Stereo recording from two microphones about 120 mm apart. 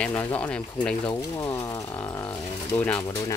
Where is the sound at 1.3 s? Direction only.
25° left (ahead or behind).